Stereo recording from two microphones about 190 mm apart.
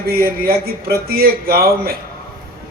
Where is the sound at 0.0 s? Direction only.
55° right (ahead or behind).